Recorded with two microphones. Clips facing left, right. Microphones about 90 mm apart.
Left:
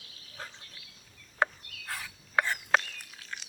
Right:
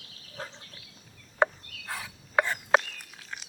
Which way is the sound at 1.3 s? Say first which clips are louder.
Right 4 dB; 15° right (ahead or behind).